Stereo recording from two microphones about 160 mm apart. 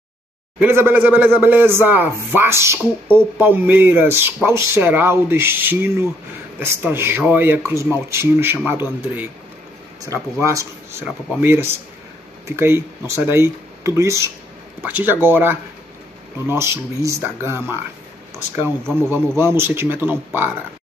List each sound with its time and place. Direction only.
0.6 s speech: 15° right (ahead or behind)
10.4 s speech: 20° right (ahead or behind)
18.9 s speech: 15° right (ahead or behind)